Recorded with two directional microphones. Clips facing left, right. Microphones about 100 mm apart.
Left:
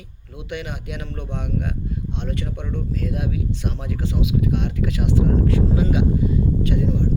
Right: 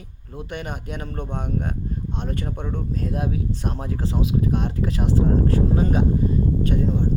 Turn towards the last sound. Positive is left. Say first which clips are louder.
# even
turn(degrees=-40)  # may be behind; listen again after turning